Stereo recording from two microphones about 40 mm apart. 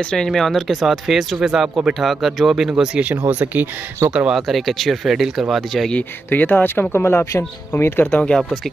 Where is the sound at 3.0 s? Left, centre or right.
Right.